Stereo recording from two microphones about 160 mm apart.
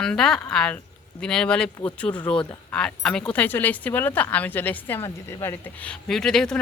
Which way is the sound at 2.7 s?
5° left (ahead or behind).